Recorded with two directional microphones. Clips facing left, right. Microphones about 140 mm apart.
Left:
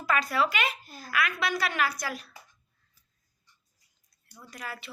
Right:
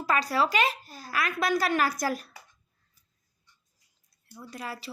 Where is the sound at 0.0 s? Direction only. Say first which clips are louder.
Right 1 dB; 30° right (ahead or behind).